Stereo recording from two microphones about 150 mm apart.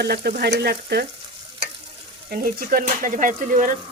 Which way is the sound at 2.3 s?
70° right (ahead or behind).